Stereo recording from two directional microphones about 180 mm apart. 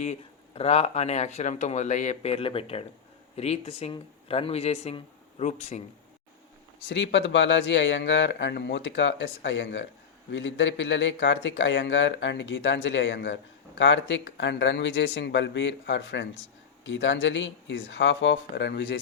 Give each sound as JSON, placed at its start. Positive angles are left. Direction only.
{"t": 0.0, "sound": "speech", "side_deg": 35}
{"t": 6.8, "sound": "speech", "side_deg": 85}
{"t": 16.8, "sound": "speech", "side_deg": 90}